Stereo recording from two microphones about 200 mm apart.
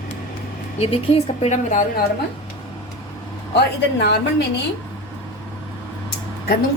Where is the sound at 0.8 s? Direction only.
30° left (ahead or behind).